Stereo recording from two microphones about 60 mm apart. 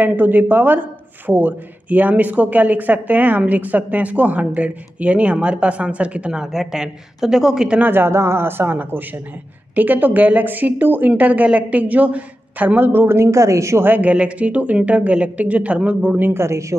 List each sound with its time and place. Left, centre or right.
0.0 s speech: right; by 7.8 s centre
7.8 s speech: right
8.1 s speech: right
13.8 s speech: right
16.2 s speech: right